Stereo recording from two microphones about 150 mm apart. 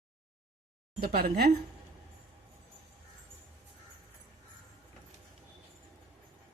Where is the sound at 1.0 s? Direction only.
90° right.